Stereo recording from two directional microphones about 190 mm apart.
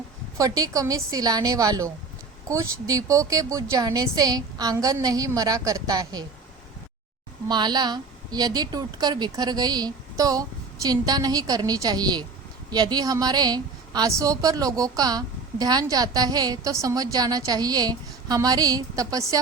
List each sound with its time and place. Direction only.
0.3 s a woman's voice: 15° right (ahead or behind)
7.4 s a woman's voice: 20° right (ahead or behind)